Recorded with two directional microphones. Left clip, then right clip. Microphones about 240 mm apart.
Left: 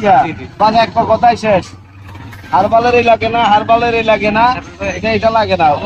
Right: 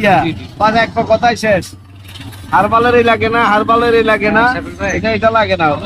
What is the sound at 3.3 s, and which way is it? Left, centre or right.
A man's voice, right.